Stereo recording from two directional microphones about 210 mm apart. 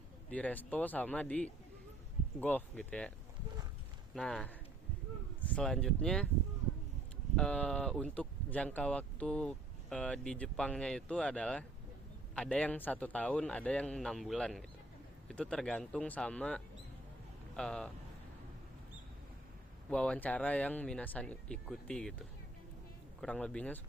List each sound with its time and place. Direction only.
0.3 s speech: 5° left (ahead or behind)
4.1 s speech: 5° left (ahead or behind)
7.3 s speech: 5° left (ahead or behind)
19.9 s speech: 5° left (ahead or behind)
23.2 s speech: 5° left (ahead or behind)